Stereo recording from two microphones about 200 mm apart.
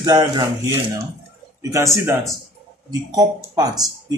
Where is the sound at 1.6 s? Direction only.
15° right (ahead or behind).